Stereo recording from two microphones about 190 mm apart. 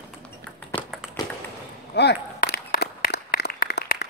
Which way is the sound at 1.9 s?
60° left (ahead or behind).